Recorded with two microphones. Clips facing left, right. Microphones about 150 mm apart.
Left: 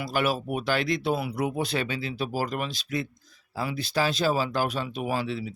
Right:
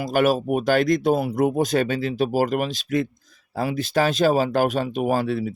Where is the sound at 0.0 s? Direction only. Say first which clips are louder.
Right 7 dB; 45° right (ahead or behind).